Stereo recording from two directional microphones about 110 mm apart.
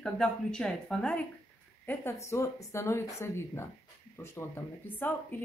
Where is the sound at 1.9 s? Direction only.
25° left (ahead or behind).